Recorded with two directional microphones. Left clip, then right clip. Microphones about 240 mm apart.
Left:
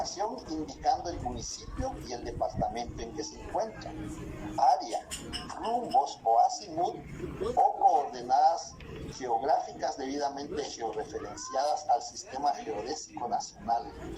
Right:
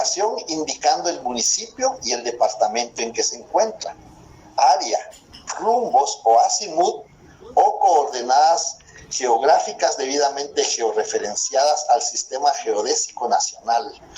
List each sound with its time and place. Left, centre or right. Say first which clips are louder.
0.0 s speech: right 13 dB; right
4.5 s speech: right 10 dB; right
7.9 s speech: right 10 dB; right